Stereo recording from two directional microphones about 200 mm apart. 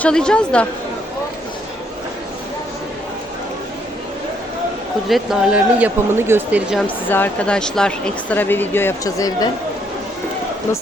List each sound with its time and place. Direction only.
0.0 s speech: 5° left (ahead or behind)
5.0 s speech: centre (ahead or behind)
6.8 s a woman's voice: 10° left (ahead or behind)